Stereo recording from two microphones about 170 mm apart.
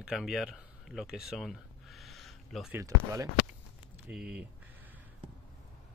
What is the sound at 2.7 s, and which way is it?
Speech, 15° right (ahead or behind).